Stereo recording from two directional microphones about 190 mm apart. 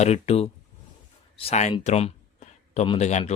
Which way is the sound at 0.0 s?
35° left (ahead or behind).